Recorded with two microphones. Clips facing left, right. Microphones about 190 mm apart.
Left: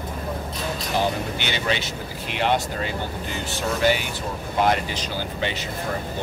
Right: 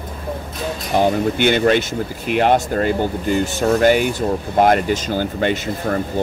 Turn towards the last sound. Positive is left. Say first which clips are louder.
# right 8 dB
turn(degrees=-50)  # may be behind; listen again after turning